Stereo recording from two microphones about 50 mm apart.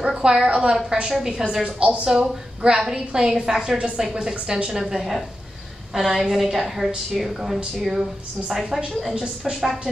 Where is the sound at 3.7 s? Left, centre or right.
Right.